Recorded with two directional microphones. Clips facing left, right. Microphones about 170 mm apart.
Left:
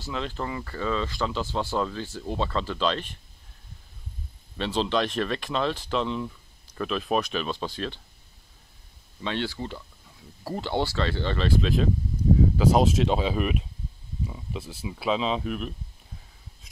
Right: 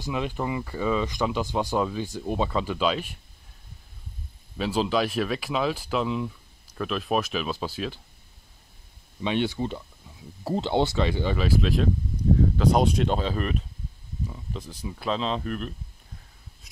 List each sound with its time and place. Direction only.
0.0 s speech: 15° right (ahead or behind)
4.6 s speech: 5° right (ahead or behind)
9.2 s speech: 15° right (ahead or behind); by 15.7 s 5° left (ahead or behind)